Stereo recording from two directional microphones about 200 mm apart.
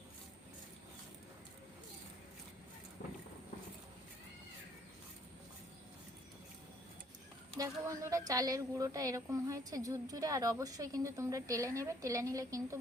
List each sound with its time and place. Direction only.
7.5 s speech: 15° right (ahead or behind)